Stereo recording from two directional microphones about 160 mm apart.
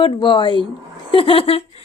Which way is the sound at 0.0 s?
30° left (ahead or behind).